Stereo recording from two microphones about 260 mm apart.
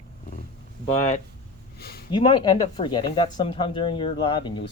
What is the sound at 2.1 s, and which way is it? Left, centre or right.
Speech, centre.